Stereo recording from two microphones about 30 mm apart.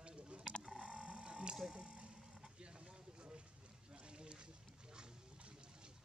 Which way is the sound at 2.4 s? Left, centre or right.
Right.